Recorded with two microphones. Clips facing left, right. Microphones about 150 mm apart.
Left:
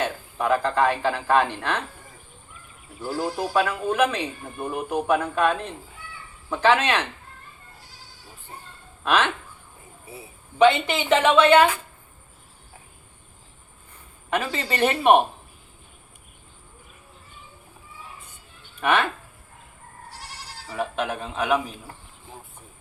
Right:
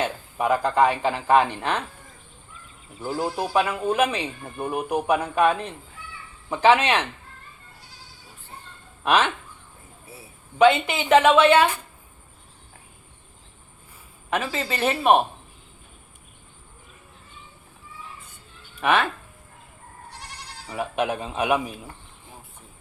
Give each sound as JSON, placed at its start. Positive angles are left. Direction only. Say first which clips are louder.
{"t": 0.0, "sound": "speech", "louder": "right 1 dB", "side_deg": -15}
{"t": 3.2, "sound": "speech", "louder": "even", "side_deg": -20}
{"t": 9.0, "sound": "speech", "louder": "right 1 dB", "side_deg": -15}
{"t": 10.6, "sound": "speech", "louder": "even", "side_deg": -10}
{"t": 14.3, "sound": "speech", "louder": "even", "side_deg": -5}
{"t": 18.8, "sound": "speech", "louder": "even", "side_deg": -10}
{"t": 20.7, "sound": "speech", "louder": "right 2 dB", "side_deg": -15}